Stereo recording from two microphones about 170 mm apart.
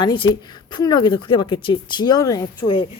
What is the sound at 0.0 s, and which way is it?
Speech, 25° left (ahead or behind).